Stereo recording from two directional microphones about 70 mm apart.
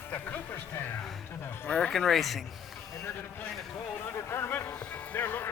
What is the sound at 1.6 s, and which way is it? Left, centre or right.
Speech, centre.